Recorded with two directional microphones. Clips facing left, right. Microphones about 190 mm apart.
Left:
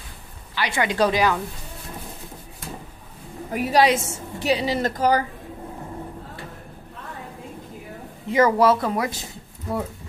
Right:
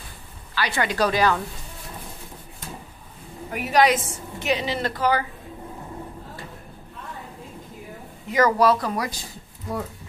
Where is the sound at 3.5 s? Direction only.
35° left (ahead or behind).